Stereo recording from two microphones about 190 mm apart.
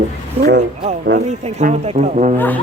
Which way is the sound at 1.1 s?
50° right (ahead or behind).